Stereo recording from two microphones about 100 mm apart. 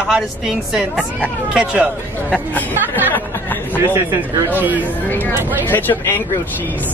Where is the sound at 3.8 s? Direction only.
20° right (ahead or behind).